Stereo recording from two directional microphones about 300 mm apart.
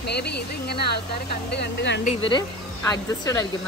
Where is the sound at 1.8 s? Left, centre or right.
Left.